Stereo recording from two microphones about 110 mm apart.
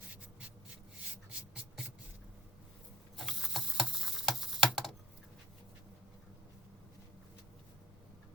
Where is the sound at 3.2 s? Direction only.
5° right (ahead or behind).